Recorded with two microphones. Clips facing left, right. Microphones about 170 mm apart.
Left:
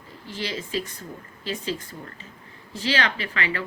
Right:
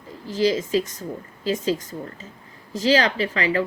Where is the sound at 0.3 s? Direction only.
40° right (ahead or behind).